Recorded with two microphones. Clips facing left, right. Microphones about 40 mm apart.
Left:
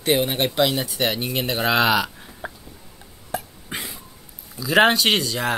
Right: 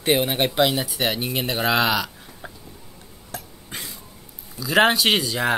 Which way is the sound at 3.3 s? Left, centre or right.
Centre.